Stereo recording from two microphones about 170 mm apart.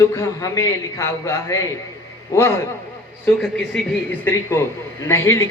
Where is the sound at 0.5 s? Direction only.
15° left (ahead or behind).